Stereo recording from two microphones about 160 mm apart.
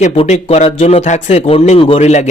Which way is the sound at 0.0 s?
40° left (ahead or behind).